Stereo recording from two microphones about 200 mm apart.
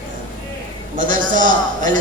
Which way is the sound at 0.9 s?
40° right (ahead or behind).